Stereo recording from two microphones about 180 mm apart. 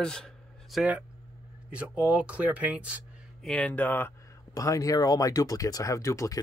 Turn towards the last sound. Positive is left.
turn(degrees=15)  # may be behind; listen again after turning